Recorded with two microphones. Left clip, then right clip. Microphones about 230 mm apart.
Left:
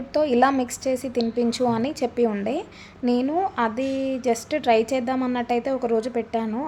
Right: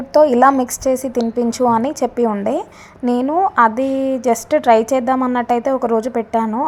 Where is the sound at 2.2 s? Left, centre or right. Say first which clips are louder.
Right 5 dB; centre.